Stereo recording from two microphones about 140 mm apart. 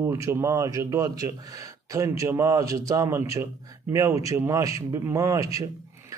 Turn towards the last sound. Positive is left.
turn(degrees=-25)  # may be behind; listen again after turning